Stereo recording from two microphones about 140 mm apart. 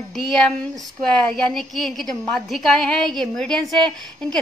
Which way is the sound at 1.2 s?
5° left (ahead or behind).